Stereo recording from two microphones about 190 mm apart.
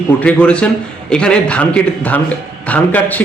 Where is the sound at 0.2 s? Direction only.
5° left (ahead or behind).